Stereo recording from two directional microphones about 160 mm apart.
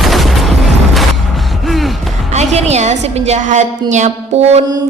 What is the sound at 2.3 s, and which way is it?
Speech, 45° right (ahead or behind).